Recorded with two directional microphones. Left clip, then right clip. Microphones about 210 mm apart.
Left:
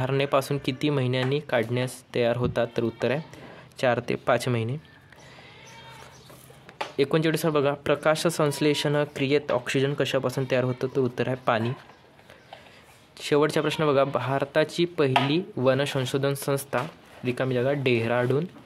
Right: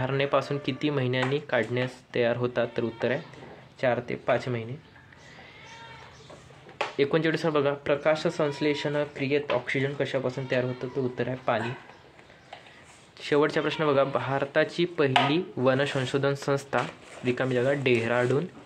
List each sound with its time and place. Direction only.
0.0 s speech: 35° left (ahead or behind)
7.0 s speech: 30° left (ahead or behind)
13.2 s speech: 35° left (ahead or behind)